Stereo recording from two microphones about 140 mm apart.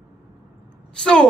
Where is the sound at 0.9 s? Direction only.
5° left (ahead or behind).